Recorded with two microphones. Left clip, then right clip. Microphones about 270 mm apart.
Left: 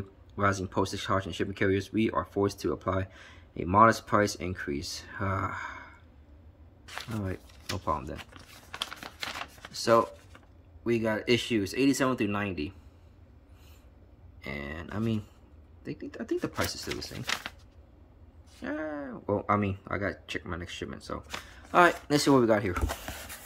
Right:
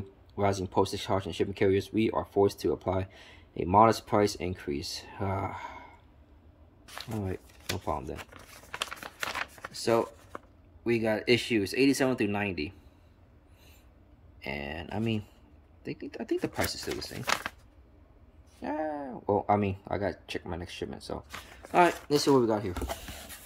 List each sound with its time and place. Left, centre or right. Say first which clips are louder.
0.4 s speech: right 1 dB; centre
6.9 s speech: even; centre
8.2 s shuffling cards: right 1 dB; centre
9.7 s speech: left 4 dB; centre
10.3 s a sound: right 11 dB; centre
10.8 s speech: right 1 dB; centre
14.4 s speech: right 2 dB; centre
18.6 s speech: right 2 dB; centre